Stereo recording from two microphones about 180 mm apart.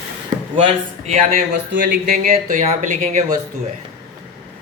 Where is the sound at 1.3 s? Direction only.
60° right (ahead or behind).